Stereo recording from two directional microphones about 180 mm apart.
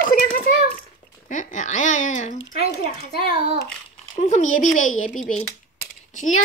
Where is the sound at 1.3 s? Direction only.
45° left (ahead or behind).